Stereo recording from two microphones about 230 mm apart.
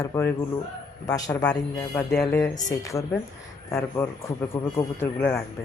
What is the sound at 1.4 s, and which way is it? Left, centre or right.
Speech, centre.